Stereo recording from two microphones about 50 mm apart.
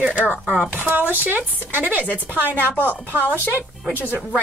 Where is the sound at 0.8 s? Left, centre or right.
Right.